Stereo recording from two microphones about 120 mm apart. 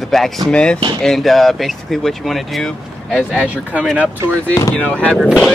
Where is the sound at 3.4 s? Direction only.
10° right (ahead or behind).